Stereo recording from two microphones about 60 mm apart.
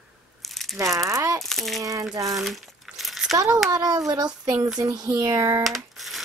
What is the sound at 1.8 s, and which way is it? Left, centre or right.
Speech, right.